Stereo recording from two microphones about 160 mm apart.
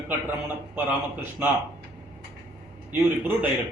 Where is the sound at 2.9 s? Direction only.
10° right (ahead or behind).